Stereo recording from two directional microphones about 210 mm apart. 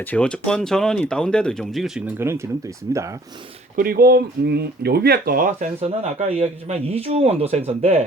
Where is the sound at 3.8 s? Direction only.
45° right (ahead or behind).